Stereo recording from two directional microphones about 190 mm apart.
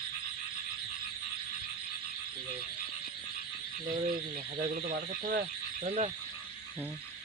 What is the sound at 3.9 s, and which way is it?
Frog, 50° right (ahead or behind).